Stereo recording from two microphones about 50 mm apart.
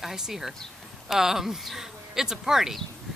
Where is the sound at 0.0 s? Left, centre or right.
Centre.